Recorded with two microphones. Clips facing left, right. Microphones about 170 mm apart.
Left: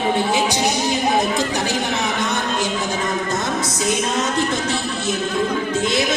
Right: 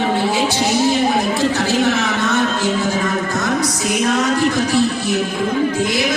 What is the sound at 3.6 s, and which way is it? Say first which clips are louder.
Music: right 3 dB; 25° left (ahead or behind).